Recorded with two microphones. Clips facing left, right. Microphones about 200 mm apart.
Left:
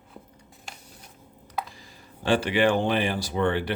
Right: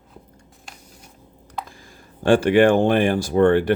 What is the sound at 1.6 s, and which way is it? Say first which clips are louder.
Speech: right 2 dB; 50° right (ahead or behind).